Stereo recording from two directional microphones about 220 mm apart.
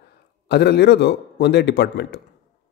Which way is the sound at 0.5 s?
50° left (ahead or behind).